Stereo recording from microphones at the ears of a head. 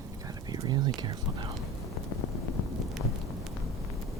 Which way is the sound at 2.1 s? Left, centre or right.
Left.